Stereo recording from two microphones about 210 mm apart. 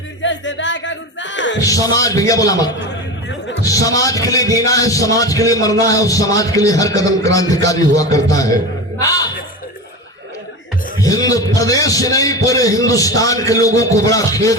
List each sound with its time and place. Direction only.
0.2 s music: 60° left (ahead or behind)
1.5 s a man's voice: 15° left (ahead or behind)
9.0 s music: 15° left (ahead or behind)
11.0 s a man's voice: 15° left (ahead or behind)